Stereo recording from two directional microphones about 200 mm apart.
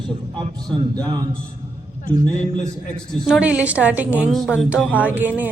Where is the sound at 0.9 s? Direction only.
20° right (ahead or behind).